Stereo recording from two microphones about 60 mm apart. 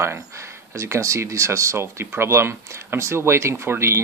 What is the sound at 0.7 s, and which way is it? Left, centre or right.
Speech, right.